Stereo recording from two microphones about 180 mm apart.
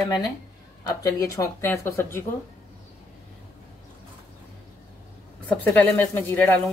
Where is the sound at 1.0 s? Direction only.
20° left (ahead or behind).